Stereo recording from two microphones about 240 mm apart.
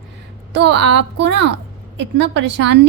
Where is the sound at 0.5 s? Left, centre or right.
Right.